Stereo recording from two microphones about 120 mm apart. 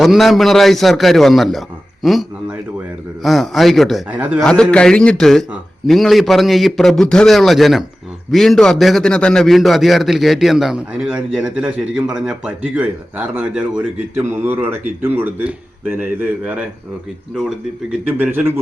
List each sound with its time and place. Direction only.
0.0 s a man's voice: centre (ahead or behind)
3.2 s a man's voice: centre (ahead or behind)
4.1 s speech: 15° right (ahead or behind)
4.4 s a man's voice: 5° left (ahead or behind); by 16.6 s 10° right (ahead or behind)
18.2 s speech: 15° right (ahead or behind)